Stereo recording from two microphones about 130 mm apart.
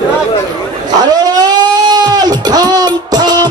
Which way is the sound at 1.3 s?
30° right (ahead or behind).